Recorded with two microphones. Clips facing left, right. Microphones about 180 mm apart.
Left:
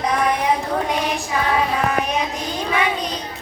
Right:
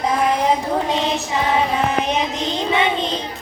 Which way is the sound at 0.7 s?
25° right (ahead or behind).